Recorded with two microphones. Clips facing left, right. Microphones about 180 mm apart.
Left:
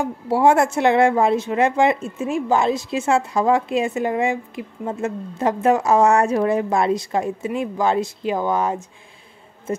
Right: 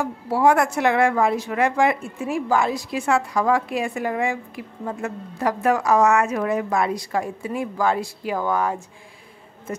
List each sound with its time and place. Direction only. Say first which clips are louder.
0.0 s speech: left 2 dB; 25° left (ahead or behind)